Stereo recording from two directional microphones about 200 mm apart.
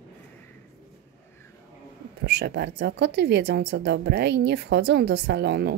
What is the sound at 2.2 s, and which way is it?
A woman's voice, 55° right (ahead or behind).